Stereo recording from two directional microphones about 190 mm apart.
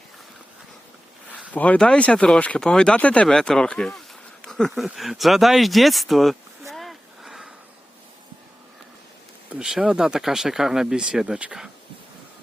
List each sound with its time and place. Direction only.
1.5 s speech: 5° left (ahead or behind)
4.4 s a sound: centre (ahead or behind)
9.5 s speech: 5° right (ahead or behind)